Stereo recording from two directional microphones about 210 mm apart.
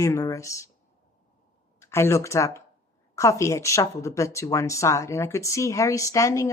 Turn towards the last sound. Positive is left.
turn(degrees=15)  # may be behind; listen again after turning